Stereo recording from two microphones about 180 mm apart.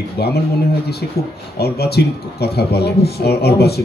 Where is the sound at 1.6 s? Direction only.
65° left (ahead or behind).